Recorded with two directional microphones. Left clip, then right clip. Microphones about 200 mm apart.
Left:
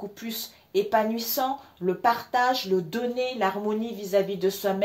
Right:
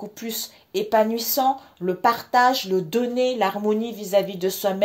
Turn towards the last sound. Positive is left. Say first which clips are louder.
# right 2 dB
turn(degrees=-45)  # may be behind; listen again after turning